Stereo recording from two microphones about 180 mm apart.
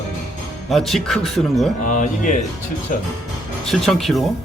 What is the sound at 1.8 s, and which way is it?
Speech, 45° left (ahead or behind).